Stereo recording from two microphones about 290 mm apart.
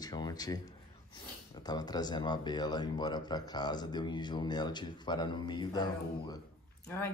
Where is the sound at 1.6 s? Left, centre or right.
Centre.